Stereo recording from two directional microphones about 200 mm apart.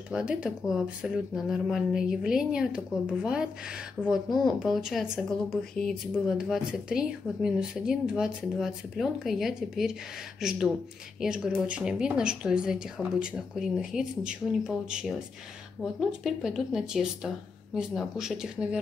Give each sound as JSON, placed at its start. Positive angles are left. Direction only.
{"t": 0.1, "sound": "speech", "side_deg": -5}